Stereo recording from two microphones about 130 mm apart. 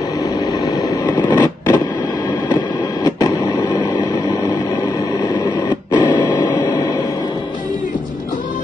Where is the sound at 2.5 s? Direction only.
30° left (ahead or behind).